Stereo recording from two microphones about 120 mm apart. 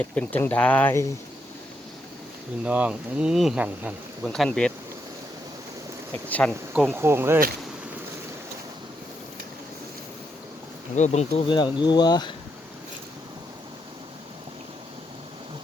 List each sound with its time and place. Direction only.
0.0 s speech: 10° left (ahead or behind)
2.6 s speech: 10° right (ahead or behind)
4.3 s speech: 5° left (ahead or behind)
6.2 s speech: 15° left (ahead or behind)
6.7 s insect: 15° right (ahead or behind)
10.9 s speech: 75° left (ahead or behind)
11.4 s speech: 40° left (ahead or behind)